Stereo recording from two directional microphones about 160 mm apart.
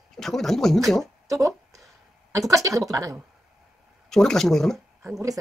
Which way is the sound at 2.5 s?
20° right (ahead or behind).